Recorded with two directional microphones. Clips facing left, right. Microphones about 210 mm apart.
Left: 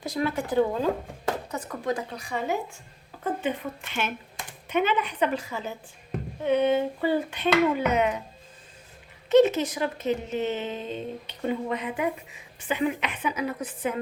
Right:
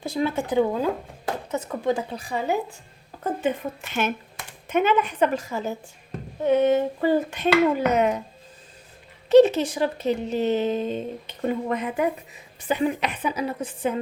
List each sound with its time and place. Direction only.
0.0 s speech: 25° right (ahead or behind)
9.3 s speech: 30° right (ahead or behind)